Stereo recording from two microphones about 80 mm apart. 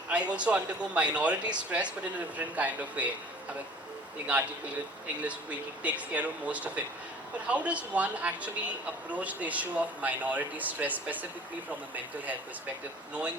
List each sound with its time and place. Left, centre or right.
0.3 s speech: centre
4.3 s speech: centre